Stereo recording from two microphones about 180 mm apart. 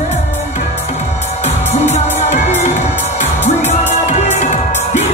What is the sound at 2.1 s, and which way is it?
Music, 40° left (ahead or behind).